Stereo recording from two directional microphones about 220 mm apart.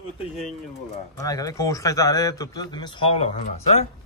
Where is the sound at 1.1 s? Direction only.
15° left (ahead or behind).